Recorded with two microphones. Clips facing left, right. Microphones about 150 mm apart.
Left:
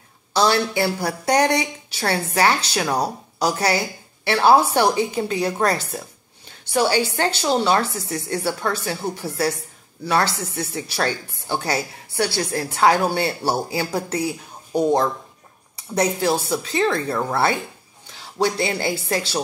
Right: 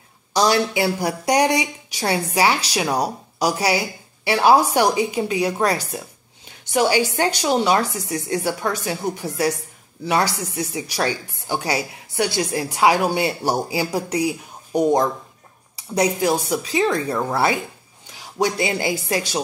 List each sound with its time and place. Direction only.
0.3 s speech: 15° right (ahead or behind)